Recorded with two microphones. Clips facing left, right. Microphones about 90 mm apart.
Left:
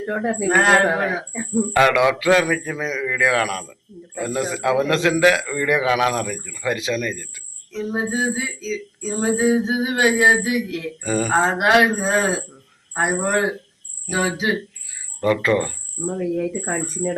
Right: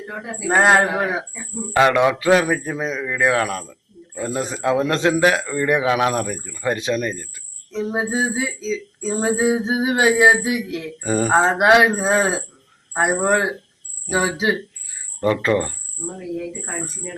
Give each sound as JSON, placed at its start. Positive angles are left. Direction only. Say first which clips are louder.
{"t": 0.0, "sound": "speech", "louder": "left 8 dB", "side_deg": 50}
{"t": 0.4, "sound": "a sound", "louder": "right 2 dB", "side_deg": -25}
{"t": 1.7, "sound": "a man's voice", "louder": "right 1 dB", "side_deg": -25}
{"t": 7.7, "sound": "a sound", "louder": "right 1 dB", "side_deg": -20}
{"t": 15.2, "sound": "a man's voice", "louder": "even", "side_deg": -30}
{"t": 16.6, "sound": "speech", "louder": "left 6 dB", "side_deg": 70}